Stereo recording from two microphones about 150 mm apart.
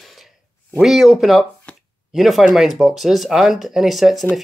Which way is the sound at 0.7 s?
Centre (ahead or behind).